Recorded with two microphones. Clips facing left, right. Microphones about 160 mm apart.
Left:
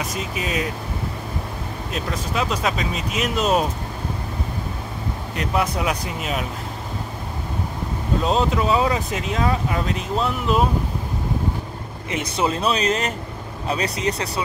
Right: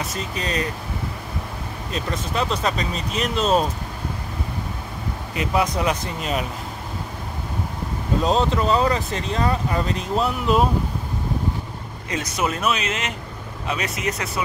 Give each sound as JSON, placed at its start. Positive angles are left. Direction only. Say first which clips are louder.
{"t": 0.3, "sound": "speech", "louder": "even", "side_deg": 5}
{"t": 1.9, "sound": "speech", "louder": "right 1 dB", "side_deg": 5}
{"t": 5.3, "sound": "speech", "louder": "right 1 dB", "side_deg": 0}
{"t": 8.2, "sound": "speech", "louder": "even", "side_deg": 0}
{"t": 12.1, "sound": "speech", "louder": "left 2 dB", "side_deg": 30}